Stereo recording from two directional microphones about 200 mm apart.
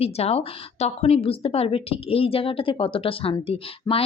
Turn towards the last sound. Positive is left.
turn(degrees=30)  # may be behind; listen again after turning